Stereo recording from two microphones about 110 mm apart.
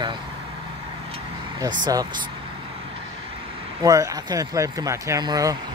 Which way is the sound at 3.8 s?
30° right (ahead or behind).